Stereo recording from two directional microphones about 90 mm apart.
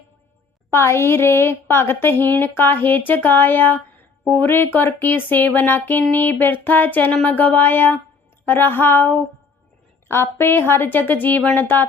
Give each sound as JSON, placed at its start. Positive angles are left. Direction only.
{"t": 0.7, "sound": "speech", "side_deg": 30}